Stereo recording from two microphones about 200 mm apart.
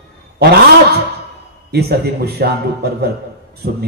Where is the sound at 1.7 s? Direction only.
55° right (ahead or behind).